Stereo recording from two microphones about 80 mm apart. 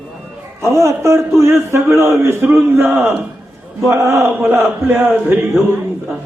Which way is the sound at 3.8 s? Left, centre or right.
Right.